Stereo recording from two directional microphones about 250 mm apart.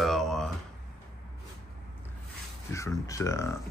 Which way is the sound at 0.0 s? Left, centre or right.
Centre.